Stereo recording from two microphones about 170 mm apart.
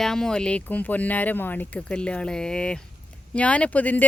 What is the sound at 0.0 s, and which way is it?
Speech, 5° left (ahead or behind).